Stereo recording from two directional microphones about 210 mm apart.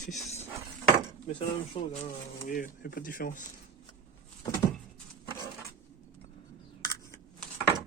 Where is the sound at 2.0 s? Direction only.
40° left (ahead or behind).